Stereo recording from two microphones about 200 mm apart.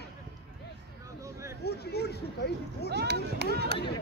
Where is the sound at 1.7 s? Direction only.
55° left (ahead or behind).